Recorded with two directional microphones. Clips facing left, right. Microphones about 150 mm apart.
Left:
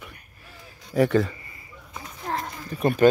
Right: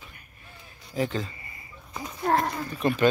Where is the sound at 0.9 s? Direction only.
70° left (ahead or behind).